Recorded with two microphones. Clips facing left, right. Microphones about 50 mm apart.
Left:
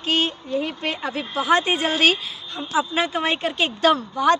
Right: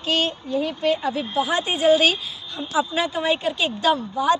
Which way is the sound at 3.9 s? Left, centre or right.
Left.